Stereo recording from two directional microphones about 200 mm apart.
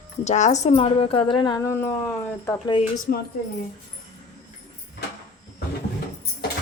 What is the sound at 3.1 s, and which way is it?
Speech, 45° left (ahead or behind).